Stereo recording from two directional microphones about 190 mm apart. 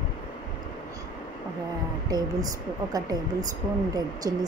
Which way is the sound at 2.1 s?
20° right (ahead or behind).